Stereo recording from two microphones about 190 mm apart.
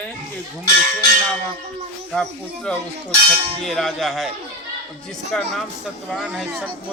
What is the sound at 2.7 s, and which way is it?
Speech, 5° left (ahead or behind).